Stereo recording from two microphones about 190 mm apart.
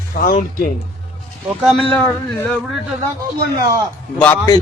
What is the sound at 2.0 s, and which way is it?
Speech, 10° left (ahead or behind).